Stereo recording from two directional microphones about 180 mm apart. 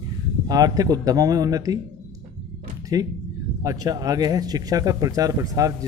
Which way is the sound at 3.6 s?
20° right (ahead or behind).